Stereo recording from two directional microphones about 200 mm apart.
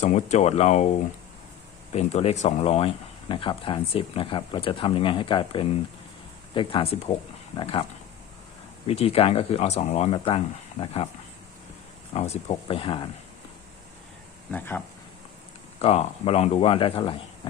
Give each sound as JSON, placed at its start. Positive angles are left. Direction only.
{"t": 0.0, "sound": "speech", "side_deg": 35}
{"t": 1.9, "sound": "speech", "side_deg": 30}
{"t": 8.9, "sound": "speech", "side_deg": 30}
{"t": 12.1, "sound": "speech", "side_deg": 30}
{"t": 14.5, "sound": "speech", "side_deg": 10}
{"t": 15.8, "sound": "speech", "side_deg": 30}